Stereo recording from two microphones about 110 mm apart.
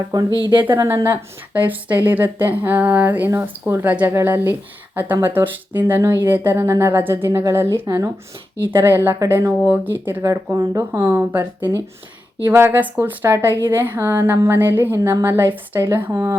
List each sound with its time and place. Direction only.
0.3 s speech: 35° left (ahead or behind)
0.6 s a woman's voice: 25° right (ahead or behind)